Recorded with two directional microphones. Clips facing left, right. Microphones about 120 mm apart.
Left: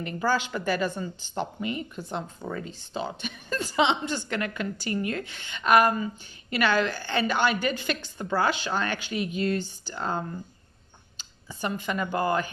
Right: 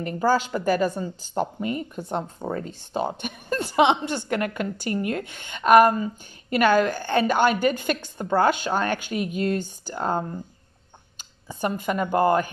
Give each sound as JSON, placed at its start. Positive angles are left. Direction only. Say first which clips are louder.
{"t": 0.0, "sound": "a woman's voice", "louder": "right 5 dB", "side_deg": -40}